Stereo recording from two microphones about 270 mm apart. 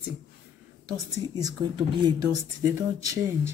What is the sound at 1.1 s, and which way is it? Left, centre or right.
Speech, centre.